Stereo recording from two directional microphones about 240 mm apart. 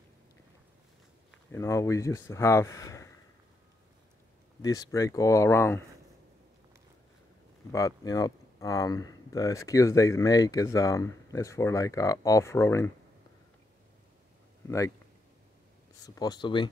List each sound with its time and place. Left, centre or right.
1.5 s speech: centre
4.6 s speech: centre
7.7 s speech: centre
16.2 s speech: centre